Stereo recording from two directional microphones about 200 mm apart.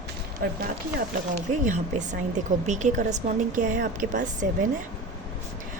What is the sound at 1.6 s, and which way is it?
A woman's voice, 35° right (ahead or behind).